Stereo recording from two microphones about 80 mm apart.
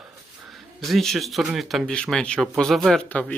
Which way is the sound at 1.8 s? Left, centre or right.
Centre.